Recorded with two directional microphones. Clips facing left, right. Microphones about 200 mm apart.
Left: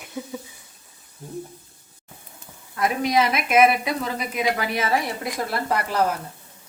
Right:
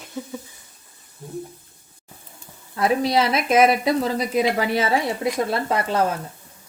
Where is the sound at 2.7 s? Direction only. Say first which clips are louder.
Right 2 dB; 30° right (ahead or behind).